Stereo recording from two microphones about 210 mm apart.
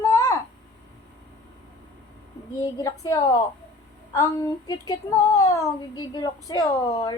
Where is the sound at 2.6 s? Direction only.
15° left (ahead or behind).